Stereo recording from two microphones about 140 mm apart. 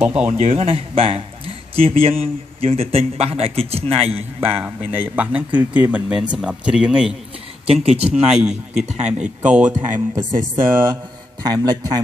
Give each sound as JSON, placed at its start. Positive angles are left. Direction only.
{"t": 0.0, "sound": "speech", "side_deg": -10}
{"t": 0.3, "sound": "a man's voice", "side_deg": -50}
{"t": 4.6, "sound": "speech", "side_deg": -15}
{"t": 7.6, "sound": "a man's voice", "side_deg": -45}
{"t": 8.3, "sound": "a man's voice", "side_deg": -5}
{"t": 11.4, "sound": "a man's voice", "side_deg": -30}